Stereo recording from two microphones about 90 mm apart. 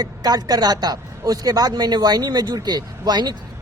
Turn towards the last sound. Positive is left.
turn(degrees=-50)  # may be behind; listen again after turning